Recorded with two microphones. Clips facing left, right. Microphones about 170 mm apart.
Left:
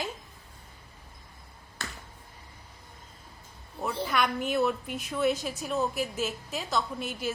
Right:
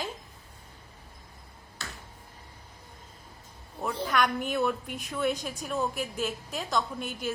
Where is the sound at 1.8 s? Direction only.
55° left (ahead or behind).